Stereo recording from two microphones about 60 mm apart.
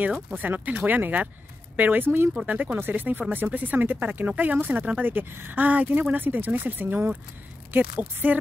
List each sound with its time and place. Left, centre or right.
0.3 s speech: right
4.6 s speech: right
5.6 s speech: right